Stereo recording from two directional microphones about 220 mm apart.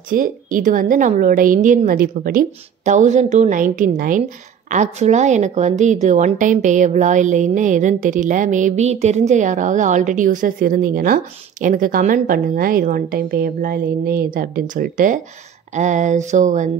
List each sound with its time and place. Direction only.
0.1 s a woman's voice: 40° right (ahead or behind)